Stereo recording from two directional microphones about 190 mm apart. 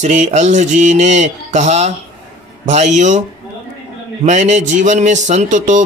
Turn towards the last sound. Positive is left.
turn(degrees=-40)  # may be behind; listen again after turning